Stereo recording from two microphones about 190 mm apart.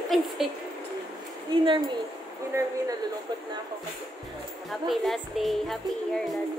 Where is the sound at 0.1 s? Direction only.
Centre (ahead or behind).